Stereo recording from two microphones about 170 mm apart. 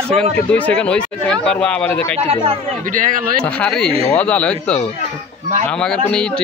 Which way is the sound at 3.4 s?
5° left (ahead or behind).